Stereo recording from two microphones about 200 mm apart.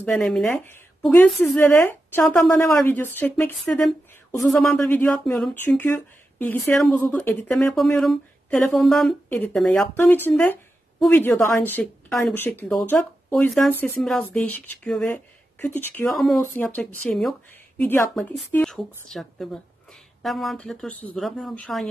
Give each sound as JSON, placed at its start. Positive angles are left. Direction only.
{"t": 0.0, "sound": "a woman's voice", "side_deg": 5}